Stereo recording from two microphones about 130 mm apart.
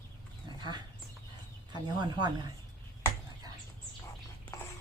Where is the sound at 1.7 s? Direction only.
35° right (ahead or behind).